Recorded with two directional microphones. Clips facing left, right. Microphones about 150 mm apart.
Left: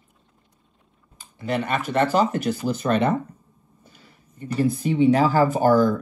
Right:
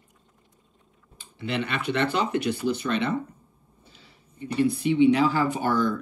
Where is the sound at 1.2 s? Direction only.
45° left (ahead or behind).